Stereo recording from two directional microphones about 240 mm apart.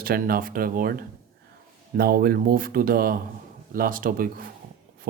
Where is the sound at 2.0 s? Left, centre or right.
Right.